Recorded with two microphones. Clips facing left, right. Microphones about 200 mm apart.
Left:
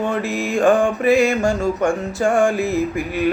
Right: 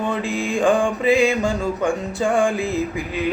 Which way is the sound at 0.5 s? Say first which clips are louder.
Left 3 dB; 15° right (ahead or behind).